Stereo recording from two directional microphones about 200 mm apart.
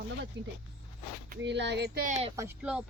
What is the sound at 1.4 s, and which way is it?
Speech, 60° right (ahead or behind).